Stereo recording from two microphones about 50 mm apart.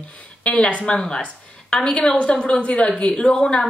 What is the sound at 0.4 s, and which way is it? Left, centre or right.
A woman's voice, left.